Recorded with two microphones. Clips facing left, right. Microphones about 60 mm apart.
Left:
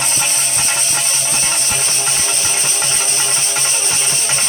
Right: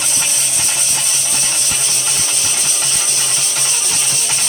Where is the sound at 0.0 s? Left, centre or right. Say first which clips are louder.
Left 2 dB; left.